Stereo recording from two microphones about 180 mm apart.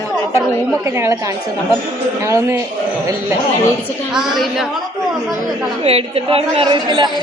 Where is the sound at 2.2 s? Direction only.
15° right (ahead or behind).